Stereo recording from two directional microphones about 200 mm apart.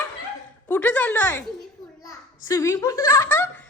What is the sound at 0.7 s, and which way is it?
A child's voice, 10° left (ahead or behind).